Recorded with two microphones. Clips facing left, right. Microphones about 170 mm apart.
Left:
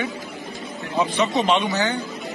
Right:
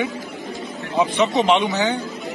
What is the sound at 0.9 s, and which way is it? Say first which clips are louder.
Speech: right 3 dB; 20° right (ahead or behind).